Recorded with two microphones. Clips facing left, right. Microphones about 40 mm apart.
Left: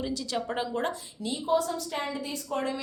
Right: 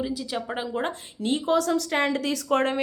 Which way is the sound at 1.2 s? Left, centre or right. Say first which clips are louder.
Right 4 dB; right.